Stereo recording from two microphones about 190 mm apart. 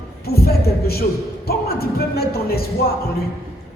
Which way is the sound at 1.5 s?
55° left (ahead or behind).